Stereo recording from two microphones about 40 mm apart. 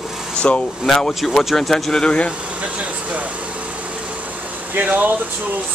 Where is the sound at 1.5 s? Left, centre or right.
Centre.